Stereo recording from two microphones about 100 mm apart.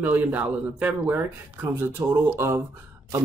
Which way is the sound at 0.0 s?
15° right (ahead or behind).